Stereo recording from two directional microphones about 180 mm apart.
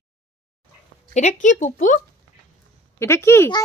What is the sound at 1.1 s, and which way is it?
Speech, 40° left (ahead or behind).